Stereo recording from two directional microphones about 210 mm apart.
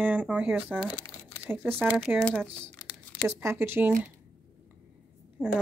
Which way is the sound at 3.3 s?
10° right (ahead or behind).